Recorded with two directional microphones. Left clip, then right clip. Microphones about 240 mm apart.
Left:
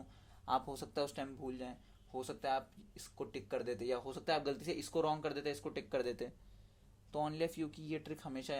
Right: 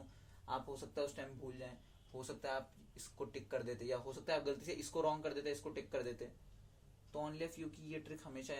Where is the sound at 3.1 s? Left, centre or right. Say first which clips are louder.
Left 2 dB; left.